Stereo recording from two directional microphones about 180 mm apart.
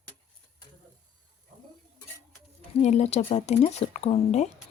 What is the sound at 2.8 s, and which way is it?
Speech, 40° left (ahead or behind).